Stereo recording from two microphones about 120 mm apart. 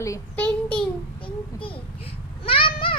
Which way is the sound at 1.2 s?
45° left (ahead or behind).